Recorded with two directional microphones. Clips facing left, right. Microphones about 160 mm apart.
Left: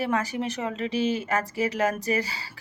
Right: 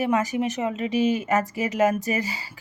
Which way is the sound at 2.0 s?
40° left (ahead or behind).